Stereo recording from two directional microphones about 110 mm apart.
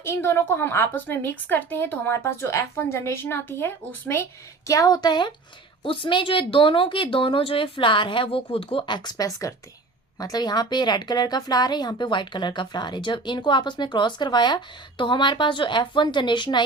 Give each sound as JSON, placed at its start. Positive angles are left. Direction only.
{"t": 0.0, "sound": "a woman's voice", "side_deg": 25}
{"t": 5.8, "sound": "speech", "side_deg": 50}
{"t": 9.0, "sound": "speech", "side_deg": 35}